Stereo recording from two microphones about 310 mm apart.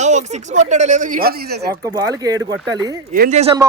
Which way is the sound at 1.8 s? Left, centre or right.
Centre.